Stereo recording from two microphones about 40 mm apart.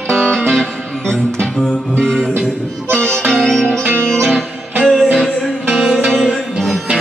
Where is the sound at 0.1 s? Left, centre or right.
Centre.